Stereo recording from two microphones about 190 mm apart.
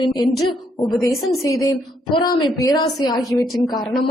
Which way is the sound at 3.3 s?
Centre (ahead or behind).